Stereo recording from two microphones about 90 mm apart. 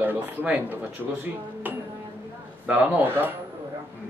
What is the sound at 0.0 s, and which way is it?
Speech, 20° right (ahead or behind).